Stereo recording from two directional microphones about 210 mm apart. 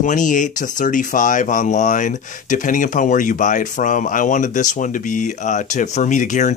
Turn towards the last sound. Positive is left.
turn(degrees=35)  # may be behind; listen again after turning